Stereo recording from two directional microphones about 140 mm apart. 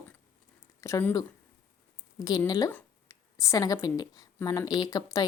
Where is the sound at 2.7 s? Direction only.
10° left (ahead or behind).